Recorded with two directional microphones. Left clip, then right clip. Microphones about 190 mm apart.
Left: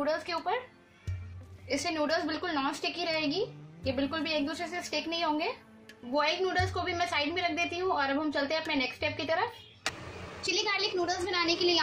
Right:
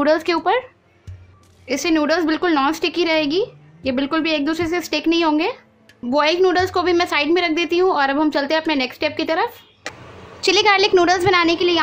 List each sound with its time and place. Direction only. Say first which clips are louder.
0.0 s a woman's voice: right 14 dB; 50° right (ahead or behind)
1.7 s a woman's voice: right 12 dB; 50° right (ahead or behind)
10.4 s a woman's voice: right 16 dB; 40° right (ahead or behind)